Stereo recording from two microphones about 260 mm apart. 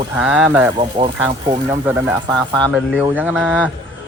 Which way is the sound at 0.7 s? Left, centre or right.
Centre.